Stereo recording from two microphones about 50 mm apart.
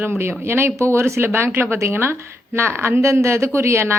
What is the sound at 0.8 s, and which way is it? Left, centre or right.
Speech, right.